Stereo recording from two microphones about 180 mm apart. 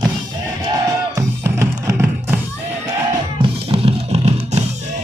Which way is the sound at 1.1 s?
15° right (ahead or behind).